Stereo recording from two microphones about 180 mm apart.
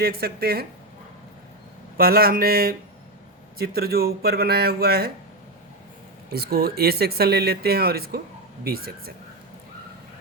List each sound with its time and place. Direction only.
0.0 s speech: 60° right (ahead or behind)
2.0 s speech: 55° right (ahead or behind)
6.3 s speech: 60° right (ahead or behind)